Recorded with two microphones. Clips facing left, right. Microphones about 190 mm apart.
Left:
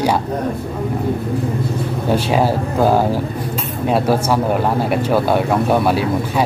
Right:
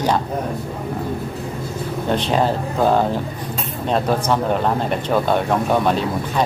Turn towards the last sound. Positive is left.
turn(degrees=10)  # may be behind; listen again after turning